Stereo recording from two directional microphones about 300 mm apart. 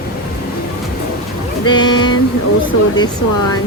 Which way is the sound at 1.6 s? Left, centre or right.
Centre.